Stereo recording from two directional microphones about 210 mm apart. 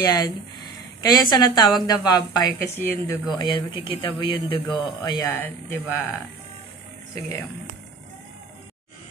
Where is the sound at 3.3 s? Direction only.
20° left (ahead or behind).